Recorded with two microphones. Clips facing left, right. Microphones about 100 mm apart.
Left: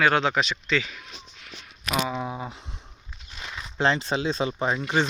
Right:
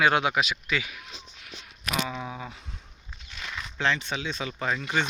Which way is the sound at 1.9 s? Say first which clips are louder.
Left 4 dB; 15° left (ahead or behind).